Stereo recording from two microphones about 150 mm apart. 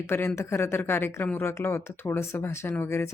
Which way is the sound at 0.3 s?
15° left (ahead or behind).